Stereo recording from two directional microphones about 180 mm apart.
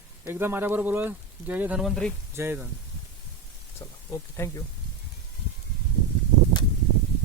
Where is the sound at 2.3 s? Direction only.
10° right (ahead or behind).